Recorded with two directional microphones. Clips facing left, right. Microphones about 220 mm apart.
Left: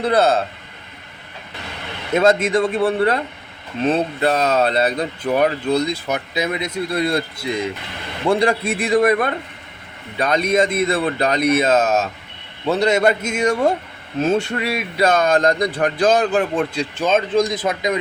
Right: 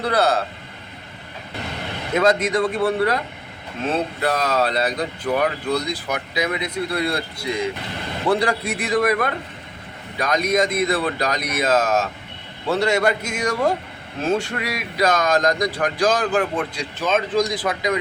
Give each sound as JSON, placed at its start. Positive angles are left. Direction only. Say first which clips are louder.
{"t": 0.1, "sound": "speech", "louder": "left 3 dB", "side_deg": 25}
{"t": 2.1, "sound": "speech", "louder": "left 3 dB", "side_deg": 25}
{"t": 8.3, "sound": "speech", "louder": "left 3 dB", "side_deg": 25}